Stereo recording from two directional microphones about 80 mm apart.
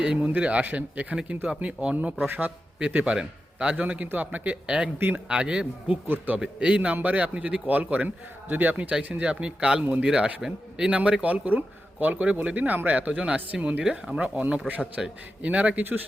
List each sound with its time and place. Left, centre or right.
0.0 s speech: centre
2.7 s speech: centre
4.9 s a man's voice: right
5.4 s a man's voice: centre
6.4 s a man's voice: centre